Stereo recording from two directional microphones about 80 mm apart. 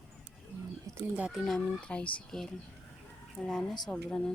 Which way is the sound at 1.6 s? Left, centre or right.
Centre.